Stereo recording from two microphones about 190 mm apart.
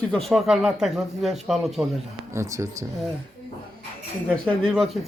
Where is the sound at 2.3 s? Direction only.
15° right (ahead or behind).